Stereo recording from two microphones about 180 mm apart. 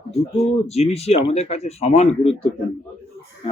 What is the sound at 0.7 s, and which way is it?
Speech, 35° left (ahead or behind).